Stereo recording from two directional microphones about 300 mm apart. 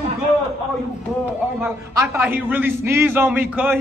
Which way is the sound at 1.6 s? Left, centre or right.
Centre.